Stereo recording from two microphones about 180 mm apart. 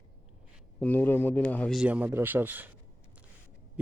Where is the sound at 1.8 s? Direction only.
10° right (ahead or behind).